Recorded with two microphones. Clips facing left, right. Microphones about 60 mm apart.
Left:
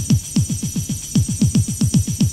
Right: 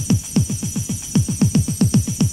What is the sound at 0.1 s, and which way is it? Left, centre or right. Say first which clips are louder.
Music: even; right.